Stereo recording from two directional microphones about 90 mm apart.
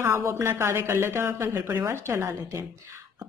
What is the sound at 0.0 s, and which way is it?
A woman's voice, 30° right (ahead or behind).